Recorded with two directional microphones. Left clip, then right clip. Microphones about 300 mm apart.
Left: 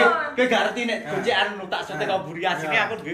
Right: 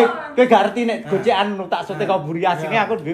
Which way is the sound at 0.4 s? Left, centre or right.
Centre.